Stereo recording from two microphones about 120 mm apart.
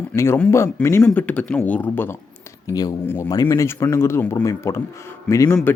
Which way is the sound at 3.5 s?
25° left (ahead or behind).